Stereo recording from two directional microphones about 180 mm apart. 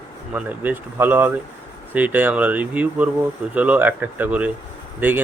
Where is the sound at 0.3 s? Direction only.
10° right (ahead or behind).